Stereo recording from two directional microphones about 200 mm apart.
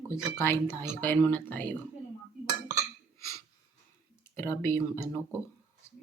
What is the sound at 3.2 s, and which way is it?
Breathing, 15° left (ahead or behind).